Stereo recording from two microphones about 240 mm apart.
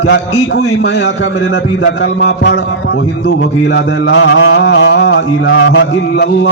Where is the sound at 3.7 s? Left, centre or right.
Left.